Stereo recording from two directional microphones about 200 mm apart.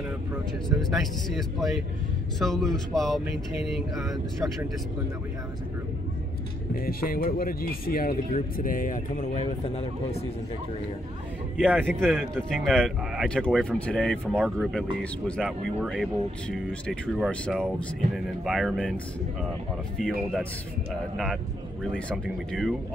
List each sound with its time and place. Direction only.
0.9 s speech: centre (ahead or behind)
6.7 s speech: 50° left (ahead or behind)
11.5 s a man's voice: 5° right (ahead or behind)
22.5 s speech: centre (ahead or behind)